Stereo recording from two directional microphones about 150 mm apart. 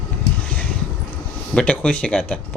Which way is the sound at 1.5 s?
10° left (ahead or behind).